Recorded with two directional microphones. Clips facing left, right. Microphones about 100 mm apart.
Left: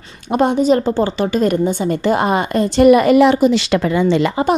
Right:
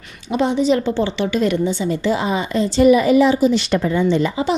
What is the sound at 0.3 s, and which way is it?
A woman's voice, 50° left (ahead or behind).